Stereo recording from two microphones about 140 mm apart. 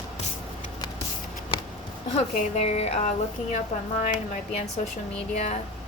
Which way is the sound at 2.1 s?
50° left (ahead or behind).